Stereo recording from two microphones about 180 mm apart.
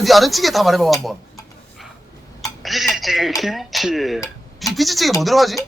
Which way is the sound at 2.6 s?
Centre (ahead or behind).